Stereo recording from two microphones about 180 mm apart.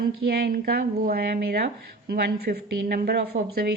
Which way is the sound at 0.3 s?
60° right (ahead or behind).